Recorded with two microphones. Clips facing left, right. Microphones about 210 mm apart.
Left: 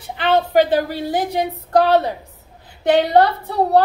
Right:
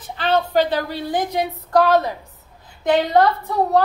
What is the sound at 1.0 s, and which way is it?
Speech, 40° left (ahead or behind).